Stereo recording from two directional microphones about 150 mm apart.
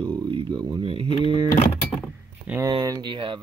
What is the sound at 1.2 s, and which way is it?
Vehicle, 30° right (ahead or behind).